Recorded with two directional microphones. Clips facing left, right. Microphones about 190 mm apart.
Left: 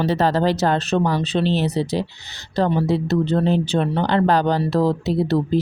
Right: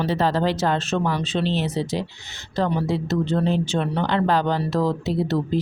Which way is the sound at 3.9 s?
35° left (ahead or behind).